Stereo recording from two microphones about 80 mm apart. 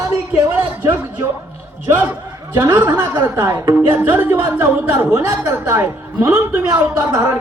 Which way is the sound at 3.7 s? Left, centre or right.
Right.